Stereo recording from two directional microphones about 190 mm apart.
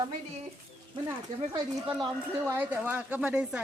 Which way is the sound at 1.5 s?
20° right (ahead or behind).